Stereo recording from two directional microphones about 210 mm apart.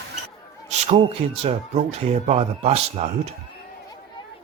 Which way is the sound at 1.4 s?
30° right (ahead or behind).